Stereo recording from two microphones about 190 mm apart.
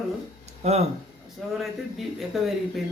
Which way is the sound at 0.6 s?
35° right (ahead or behind).